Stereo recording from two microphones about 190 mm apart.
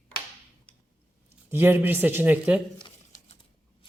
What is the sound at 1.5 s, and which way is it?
Speech, 10° right (ahead or behind).